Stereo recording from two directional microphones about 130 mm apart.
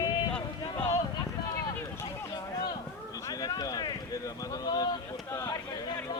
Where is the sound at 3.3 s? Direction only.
30° left (ahead or behind).